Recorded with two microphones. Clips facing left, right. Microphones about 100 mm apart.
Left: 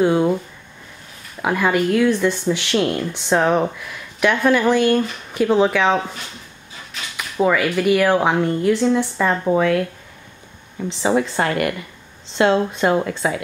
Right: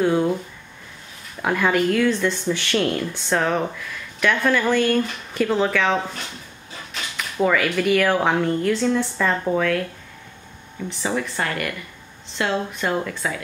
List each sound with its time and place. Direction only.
0.0 s speech: 15° left (ahead or behind)
1.4 s speech: 5° left (ahead or behind)
7.2 s speech: 10° left (ahead or behind)
11.0 s speech: 25° left (ahead or behind)